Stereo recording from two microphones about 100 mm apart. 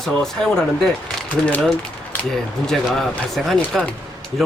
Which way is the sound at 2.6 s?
Centre (ahead or behind).